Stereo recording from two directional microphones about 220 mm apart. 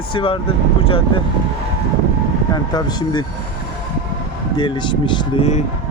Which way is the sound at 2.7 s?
20° left (ahead or behind).